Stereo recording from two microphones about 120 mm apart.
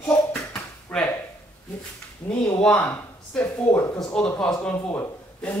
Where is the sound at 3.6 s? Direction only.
20° left (ahead or behind).